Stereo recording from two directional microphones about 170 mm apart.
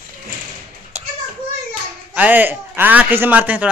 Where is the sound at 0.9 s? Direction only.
40° right (ahead or behind).